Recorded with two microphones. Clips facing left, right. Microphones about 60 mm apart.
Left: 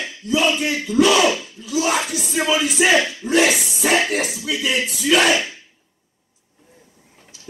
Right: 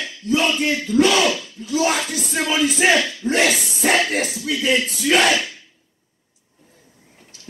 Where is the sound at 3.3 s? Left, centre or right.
Right.